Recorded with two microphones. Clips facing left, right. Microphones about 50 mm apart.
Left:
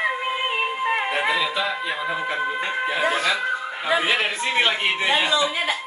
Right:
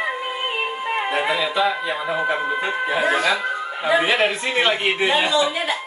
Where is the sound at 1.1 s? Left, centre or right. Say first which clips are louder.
Right 1 dB; centre.